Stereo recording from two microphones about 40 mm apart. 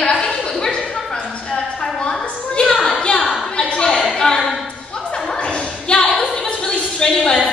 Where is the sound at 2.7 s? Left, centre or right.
Centre.